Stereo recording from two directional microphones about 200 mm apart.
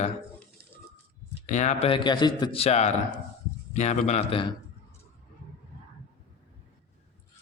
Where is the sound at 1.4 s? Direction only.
35° left (ahead or behind).